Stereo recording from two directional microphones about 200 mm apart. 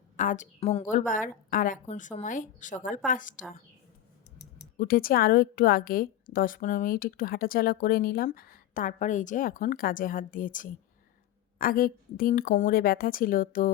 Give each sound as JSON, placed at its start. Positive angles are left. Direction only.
{"t": 0.2, "sound": "a woman's voice", "side_deg": 40}
{"t": 4.8, "sound": "a woman's voice", "side_deg": 45}